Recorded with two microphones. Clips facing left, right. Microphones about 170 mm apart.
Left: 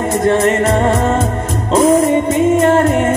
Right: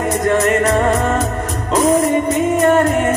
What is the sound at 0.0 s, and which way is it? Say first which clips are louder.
Music: left 3 dB; 30° left (ahead or behind).